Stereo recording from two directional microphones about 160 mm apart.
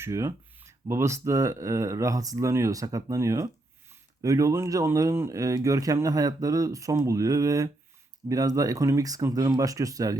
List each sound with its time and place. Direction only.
0.0 s speech: 20° right (ahead or behind)